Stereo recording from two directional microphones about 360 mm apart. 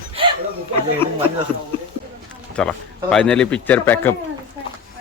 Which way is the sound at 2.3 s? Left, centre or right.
Centre.